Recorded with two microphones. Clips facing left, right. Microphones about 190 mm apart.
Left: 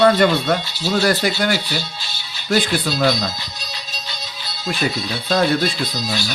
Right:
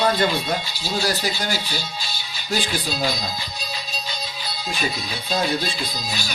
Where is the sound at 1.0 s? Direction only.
60° left (ahead or behind).